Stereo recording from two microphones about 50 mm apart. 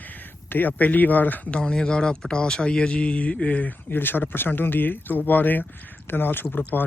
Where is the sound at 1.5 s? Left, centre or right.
Centre.